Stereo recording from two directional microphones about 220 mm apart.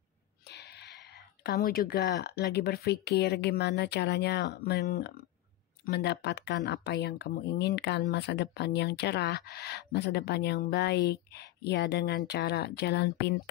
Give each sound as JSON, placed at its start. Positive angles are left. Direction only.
{"t": 0.5, "sound": "speech", "side_deg": 50}